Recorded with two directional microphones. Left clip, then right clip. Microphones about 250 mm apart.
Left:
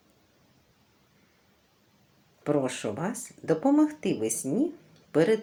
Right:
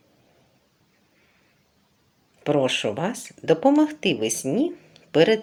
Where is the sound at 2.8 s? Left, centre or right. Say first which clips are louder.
Right 7 dB; centre.